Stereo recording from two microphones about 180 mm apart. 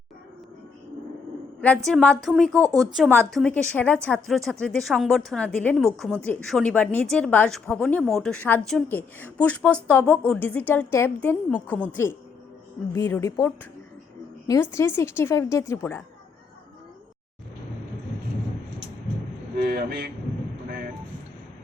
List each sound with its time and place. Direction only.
1.9 s a woman's voice: 5° left (ahead or behind)
19.5 s speech: 55° right (ahead or behind)